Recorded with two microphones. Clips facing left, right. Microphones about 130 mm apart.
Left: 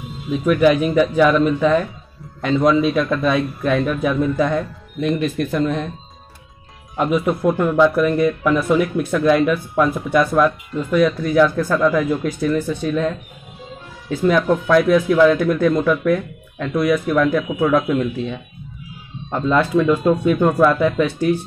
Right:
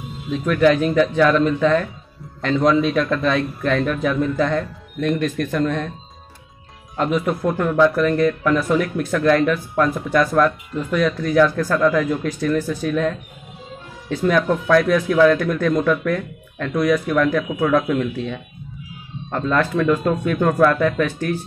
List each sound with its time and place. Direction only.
0.3 s a man's voice: 5° left (ahead or behind)
7.0 s a man's voice: 10° left (ahead or behind)